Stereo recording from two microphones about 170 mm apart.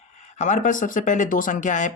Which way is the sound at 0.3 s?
45° left (ahead or behind).